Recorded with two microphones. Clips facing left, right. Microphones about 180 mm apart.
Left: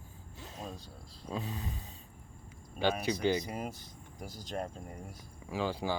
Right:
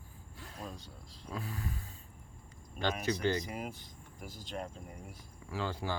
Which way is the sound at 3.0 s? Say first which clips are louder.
Left 2 dB; 15° left (ahead or behind).